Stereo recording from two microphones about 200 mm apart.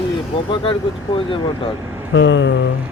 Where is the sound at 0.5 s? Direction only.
25° left (ahead or behind).